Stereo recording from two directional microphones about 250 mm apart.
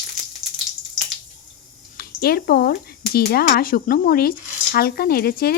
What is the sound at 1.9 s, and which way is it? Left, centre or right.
Speech, left.